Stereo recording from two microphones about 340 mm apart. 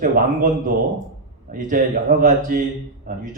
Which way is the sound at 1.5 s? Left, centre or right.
Right.